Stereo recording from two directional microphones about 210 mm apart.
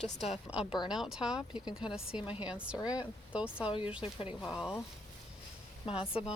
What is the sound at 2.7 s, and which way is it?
Speech, 20° left (ahead or behind).